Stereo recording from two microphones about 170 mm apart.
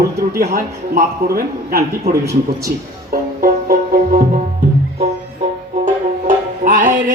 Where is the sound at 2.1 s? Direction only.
40° right (ahead or behind).